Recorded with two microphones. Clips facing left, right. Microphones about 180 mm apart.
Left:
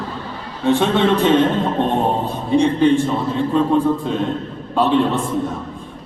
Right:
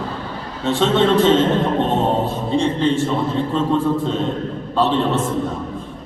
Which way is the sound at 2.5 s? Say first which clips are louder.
Left 5 dB; 15° left (ahead or behind).